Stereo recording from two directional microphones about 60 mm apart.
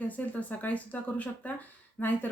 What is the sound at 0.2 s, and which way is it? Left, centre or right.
Speech, left.